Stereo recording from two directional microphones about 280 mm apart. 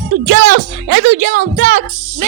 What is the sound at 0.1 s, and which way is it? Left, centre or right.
Speech, right.